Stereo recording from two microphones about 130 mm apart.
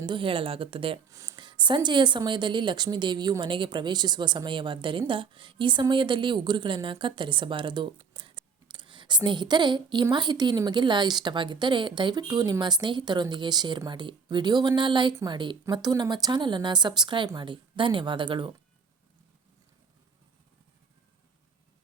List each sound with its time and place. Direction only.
0.0 s speech: 40° right (ahead or behind)
1.1 s speech: 25° right (ahead or behind)
1.4 s a woman's voice: 35° right (ahead or behind)